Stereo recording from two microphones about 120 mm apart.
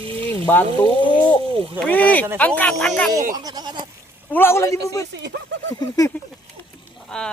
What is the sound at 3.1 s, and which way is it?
Speech, 35° right (ahead or behind).